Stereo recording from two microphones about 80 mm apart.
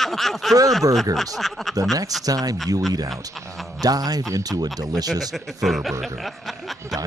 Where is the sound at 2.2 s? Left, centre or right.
Right.